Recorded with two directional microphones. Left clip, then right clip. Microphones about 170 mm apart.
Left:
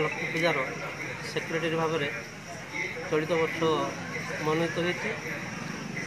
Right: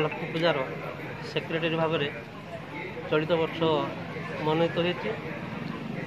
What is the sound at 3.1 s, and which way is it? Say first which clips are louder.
Speech: right 2 dB; 25° right (ahead or behind).